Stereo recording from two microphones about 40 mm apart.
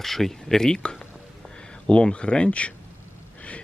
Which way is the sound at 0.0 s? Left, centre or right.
Centre.